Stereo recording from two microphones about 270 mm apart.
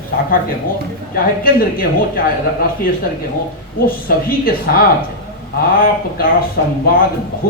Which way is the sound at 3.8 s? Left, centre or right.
Left.